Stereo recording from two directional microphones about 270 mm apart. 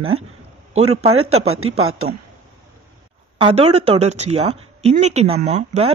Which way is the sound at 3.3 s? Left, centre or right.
Centre.